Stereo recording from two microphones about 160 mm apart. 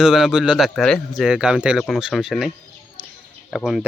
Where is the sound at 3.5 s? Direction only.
Centre (ahead or behind).